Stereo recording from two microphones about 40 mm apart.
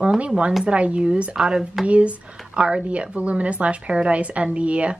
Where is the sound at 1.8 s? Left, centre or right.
Right.